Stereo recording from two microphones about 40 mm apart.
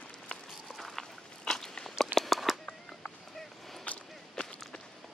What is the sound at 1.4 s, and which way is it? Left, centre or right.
Walk, centre.